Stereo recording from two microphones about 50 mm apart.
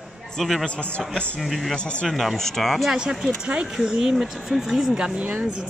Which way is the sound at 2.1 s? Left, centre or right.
Centre.